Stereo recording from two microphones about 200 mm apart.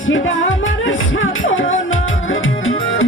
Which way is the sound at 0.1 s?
75° left (ahead or behind).